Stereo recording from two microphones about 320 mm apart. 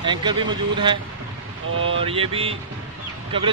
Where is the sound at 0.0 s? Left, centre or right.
Centre.